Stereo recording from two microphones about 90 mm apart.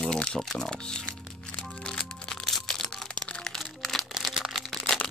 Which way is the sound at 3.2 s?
15° left (ahead or behind).